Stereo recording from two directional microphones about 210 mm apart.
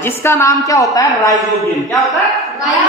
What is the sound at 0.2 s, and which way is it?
A woman's voice, 10° left (ahead or behind).